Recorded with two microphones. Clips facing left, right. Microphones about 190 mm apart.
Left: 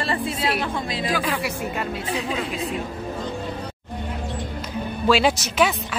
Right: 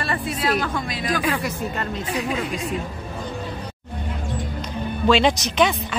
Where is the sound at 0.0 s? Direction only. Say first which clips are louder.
Even; 25° left (ahead or behind).